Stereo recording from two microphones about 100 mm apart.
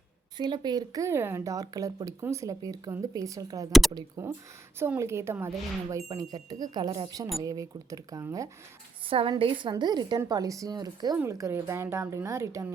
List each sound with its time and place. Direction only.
0.3 s speech: 45° right (ahead or behind)
3.7 s speech: centre (ahead or behind)
4.2 s speech: 30° right (ahead or behind); by 7.2 s 45° right (ahead or behind)
7.4 s speech: 35° right (ahead or behind)
9.0 s a woman's voice: 65° right (ahead or behind); by 10.2 s 45° right (ahead or behind)
10.2 s speech: 35° right (ahead or behind)